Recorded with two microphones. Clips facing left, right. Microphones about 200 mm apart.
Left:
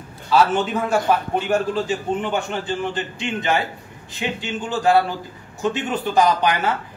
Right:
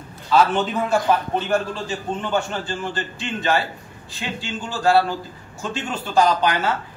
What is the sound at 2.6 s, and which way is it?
A man's voice, 20° left (ahead or behind).